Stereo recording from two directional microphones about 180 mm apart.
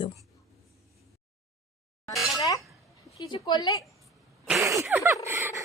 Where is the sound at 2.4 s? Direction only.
20° left (ahead or behind).